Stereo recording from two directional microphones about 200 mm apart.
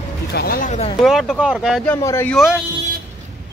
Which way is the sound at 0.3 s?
50° left (ahead or behind).